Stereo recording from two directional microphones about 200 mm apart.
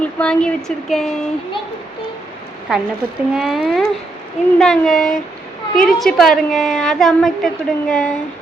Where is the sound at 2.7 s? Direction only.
5° right (ahead or behind).